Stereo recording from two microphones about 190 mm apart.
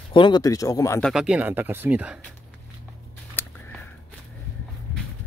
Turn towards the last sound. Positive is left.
turn(degrees=10)  # may be behind; listen again after turning